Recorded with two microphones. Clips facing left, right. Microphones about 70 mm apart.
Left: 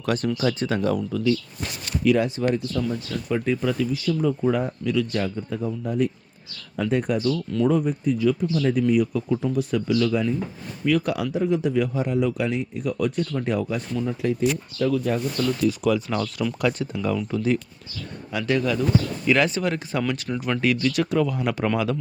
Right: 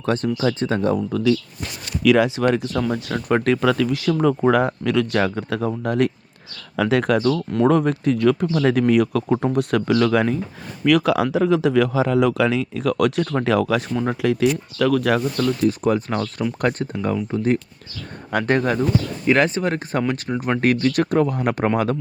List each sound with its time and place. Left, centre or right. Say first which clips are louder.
0.0 s speech: right 3 dB; right
2.0 s speech: right 5 dB; right
6.7 s speech: right 5 dB; right
13.9 s speech: right 4 dB; right
15.6 s speech: right 2 dB; right
20.6 s speech: right 4 dB; right